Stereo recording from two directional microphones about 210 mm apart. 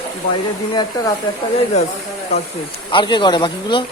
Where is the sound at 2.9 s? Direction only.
20° left (ahead or behind).